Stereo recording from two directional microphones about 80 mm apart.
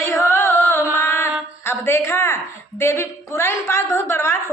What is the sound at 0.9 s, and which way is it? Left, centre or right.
Mantra, left.